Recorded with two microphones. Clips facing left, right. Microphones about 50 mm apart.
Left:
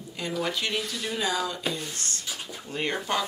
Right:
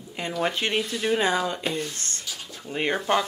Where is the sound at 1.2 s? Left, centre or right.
Right.